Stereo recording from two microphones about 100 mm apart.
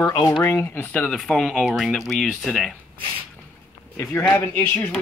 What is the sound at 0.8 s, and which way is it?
Speech, 15° left (ahead or behind).